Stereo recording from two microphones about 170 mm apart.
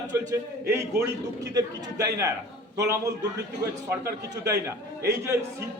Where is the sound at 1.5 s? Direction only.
20° right (ahead or behind).